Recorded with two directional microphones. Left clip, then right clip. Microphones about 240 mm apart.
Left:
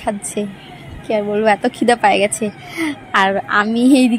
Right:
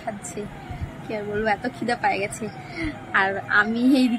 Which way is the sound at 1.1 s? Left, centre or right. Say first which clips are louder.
Left 10 dB; left.